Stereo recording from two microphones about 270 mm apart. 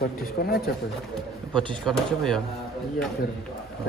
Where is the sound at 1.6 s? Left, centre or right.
Centre.